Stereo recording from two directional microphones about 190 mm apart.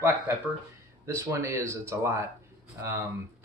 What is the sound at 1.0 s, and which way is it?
Speech, 15° right (ahead or behind).